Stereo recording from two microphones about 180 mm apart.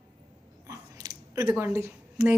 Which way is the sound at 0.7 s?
20° right (ahead or behind).